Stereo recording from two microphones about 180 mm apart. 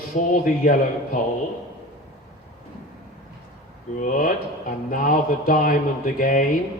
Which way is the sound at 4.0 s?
45° left (ahead or behind).